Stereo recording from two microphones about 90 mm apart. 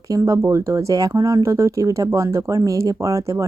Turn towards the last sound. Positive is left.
turn(degrees=-35)  # may be behind; listen again after turning